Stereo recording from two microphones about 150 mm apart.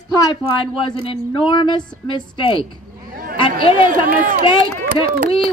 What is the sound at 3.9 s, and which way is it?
Speech, 65° right (ahead or behind).